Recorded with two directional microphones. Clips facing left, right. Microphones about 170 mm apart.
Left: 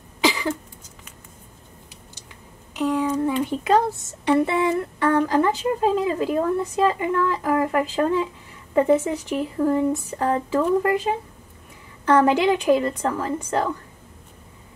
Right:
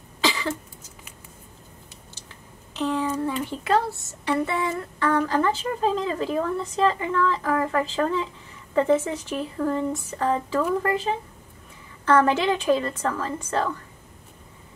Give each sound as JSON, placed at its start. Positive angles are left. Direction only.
{"t": 0.2, "sound": "cough", "side_deg": 15}
{"t": 2.7, "sound": "a sound", "side_deg": 10}
{"t": 3.4, "sound": "speech", "side_deg": 15}